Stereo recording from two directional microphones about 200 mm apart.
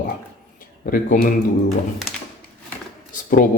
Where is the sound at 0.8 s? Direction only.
45° left (ahead or behind).